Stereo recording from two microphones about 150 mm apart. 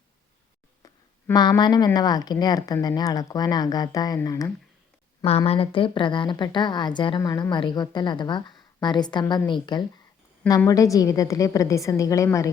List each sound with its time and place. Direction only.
1.3 s a woman's voice: 30° left (ahead or behind)
5.5 s a woman's voice: 35° left (ahead or behind)
7.2 s a woman's voice: 25° left (ahead or behind)